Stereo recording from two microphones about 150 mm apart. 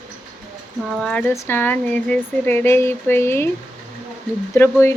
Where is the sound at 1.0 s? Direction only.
5° left (ahead or behind).